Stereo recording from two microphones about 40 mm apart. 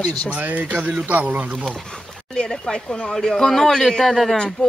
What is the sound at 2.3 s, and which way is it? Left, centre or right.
Speech, left.